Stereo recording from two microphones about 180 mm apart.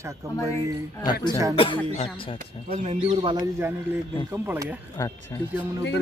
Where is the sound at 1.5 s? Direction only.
30° left (ahead or behind).